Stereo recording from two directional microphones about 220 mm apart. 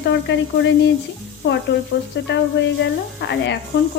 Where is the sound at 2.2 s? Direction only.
55° left (ahead or behind).